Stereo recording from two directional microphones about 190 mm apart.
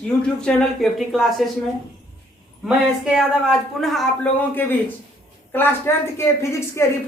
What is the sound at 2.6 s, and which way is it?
A woman's voice, 5° right (ahead or behind).